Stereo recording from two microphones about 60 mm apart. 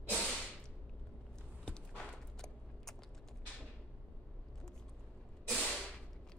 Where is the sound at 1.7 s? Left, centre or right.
Centre.